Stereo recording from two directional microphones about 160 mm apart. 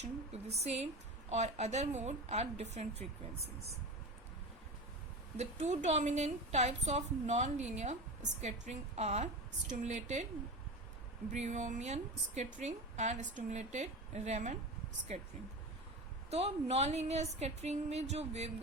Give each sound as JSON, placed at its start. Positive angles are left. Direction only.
{"t": 0.6, "sound": "a woman's voice", "side_deg": -40}
{"t": 5.4, "sound": "a woman's voice", "side_deg": -45}
{"t": 11.3, "sound": "a woman's voice", "side_deg": -50}
{"t": 16.3, "sound": "a woman's voice", "side_deg": -40}